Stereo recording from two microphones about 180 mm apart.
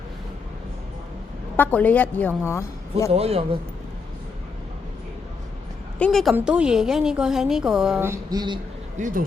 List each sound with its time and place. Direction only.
1.5 s a woman's voice: 10° left (ahead or behind)
3.1 s a man's voice: 35° right (ahead or behind)
6.0 s a woman's voice: centre (ahead or behind); by 8.5 s 20° right (ahead or behind)
9.0 s speech: 45° right (ahead or behind)